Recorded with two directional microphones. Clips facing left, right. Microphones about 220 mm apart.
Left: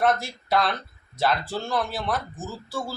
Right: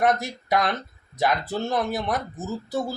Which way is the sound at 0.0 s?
20° right (ahead or behind).